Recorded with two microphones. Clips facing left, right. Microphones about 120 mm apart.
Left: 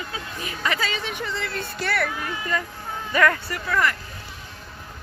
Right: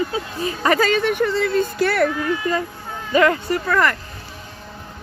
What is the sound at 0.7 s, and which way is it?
A child's voice, 50° right (ahead or behind).